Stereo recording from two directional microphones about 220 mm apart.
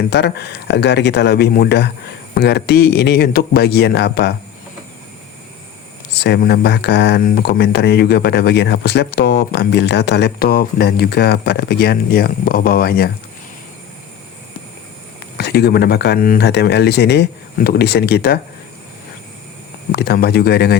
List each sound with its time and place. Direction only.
0.1 s speech: 50° left (ahead or behind)
6.1 s speech: 50° left (ahead or behind)
15.4 s speech: 45° left (ahead or behind)
19.9 s speech: 45° left (ahead or behind)